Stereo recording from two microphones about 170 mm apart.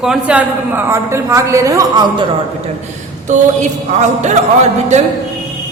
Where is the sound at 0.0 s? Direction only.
5° right (ahead or behind); by 2.2 s 20° right (ahead or behind).